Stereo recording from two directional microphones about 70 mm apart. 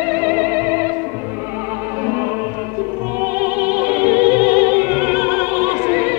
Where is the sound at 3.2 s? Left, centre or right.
Right.